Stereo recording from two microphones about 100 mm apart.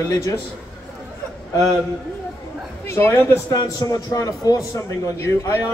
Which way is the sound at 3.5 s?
40° left (ahead or behind).